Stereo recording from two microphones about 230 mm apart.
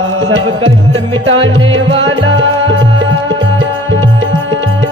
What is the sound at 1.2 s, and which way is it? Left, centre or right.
Music, right.